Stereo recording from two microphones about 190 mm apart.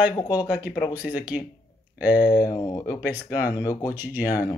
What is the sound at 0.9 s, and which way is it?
Speech, 10° right (ahead or behind).